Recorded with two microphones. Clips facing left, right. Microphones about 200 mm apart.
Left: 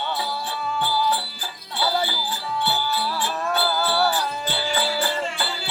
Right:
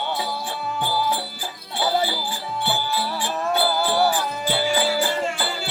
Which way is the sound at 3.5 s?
15° right (ahead or behind).